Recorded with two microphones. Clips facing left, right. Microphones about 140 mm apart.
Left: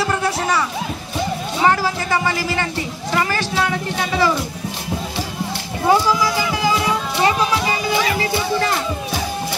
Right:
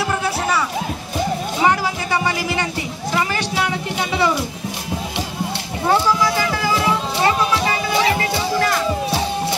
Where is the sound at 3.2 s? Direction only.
15° right (ahead or behind).